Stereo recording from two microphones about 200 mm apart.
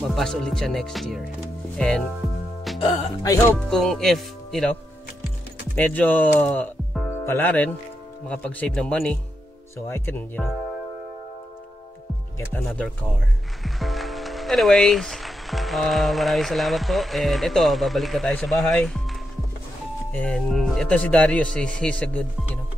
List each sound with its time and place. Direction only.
0.1 s speech: 5° left (ahead or behind)
3.2 s speech: 15° left (ahead or behind)
3.7 s speech: centre (ahead or behind)
5.8 s speech: 10° left (ahead or behind)
12.4 s speech: 5° left (ahead or behind)
20.1 s speech: 5° left (ahead or behind)